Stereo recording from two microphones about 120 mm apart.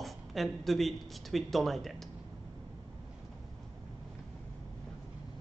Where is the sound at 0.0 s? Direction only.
Centre (ahead or behind).